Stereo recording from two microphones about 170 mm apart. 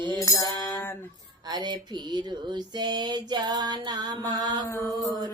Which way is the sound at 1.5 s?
25° right (ahead or behind).